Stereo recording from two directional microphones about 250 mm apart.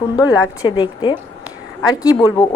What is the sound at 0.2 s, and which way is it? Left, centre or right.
A woman's voice, centre.